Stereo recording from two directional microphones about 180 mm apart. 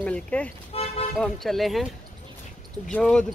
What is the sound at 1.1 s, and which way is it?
Speech, centre (ahead or behind).